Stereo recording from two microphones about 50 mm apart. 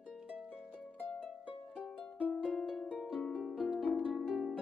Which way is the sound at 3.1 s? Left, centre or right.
Centre.